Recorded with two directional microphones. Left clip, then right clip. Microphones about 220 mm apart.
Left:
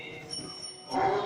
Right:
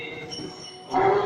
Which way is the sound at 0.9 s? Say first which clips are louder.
Right 7 dB; 40° left (ahead or behind).